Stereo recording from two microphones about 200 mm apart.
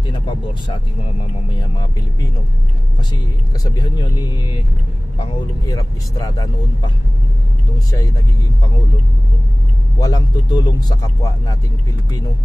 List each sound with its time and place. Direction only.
0.0 s vehicle: 25° left (ahead or behind)
3.6 s speech: 20° left (ahead or behind)
9.9 s speech: 20° left (ahead or behind)